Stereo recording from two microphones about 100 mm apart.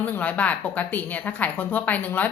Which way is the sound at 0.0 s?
15° left (ahead or behind).